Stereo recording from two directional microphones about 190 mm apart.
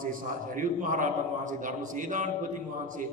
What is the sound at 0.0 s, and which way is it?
A man's voice, 45° right (ahead or behind).